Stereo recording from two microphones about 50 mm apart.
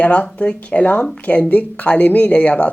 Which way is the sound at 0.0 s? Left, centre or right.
Left.